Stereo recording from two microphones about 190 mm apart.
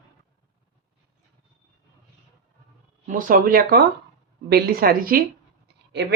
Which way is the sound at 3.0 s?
45° right (ahead or behind).